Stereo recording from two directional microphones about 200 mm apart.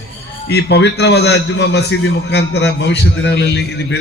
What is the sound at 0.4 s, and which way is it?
A man's voice, 55° left (ahead or behind).